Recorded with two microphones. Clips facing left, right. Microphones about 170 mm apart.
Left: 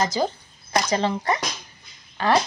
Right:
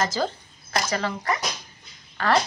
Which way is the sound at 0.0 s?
15° left (ahead or behind).